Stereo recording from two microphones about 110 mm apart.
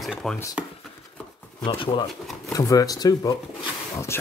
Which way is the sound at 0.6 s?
15° right (ahead or behind).